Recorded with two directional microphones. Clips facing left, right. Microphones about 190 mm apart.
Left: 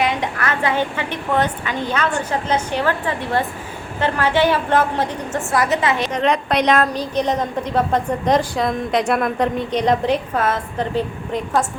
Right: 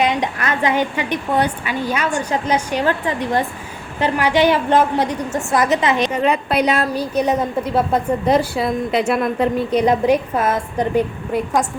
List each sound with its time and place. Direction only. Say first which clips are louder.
0.0 s a woman's voice: right 2 dB; 20° right (ahead or behind)
6.1 s a woman's voice: right 1 dB; 5° right (ahead or behind)